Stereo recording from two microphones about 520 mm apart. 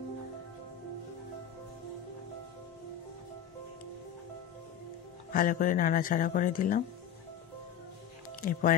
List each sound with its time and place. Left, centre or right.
5.3 s speech: centre
8.4 s speech: centre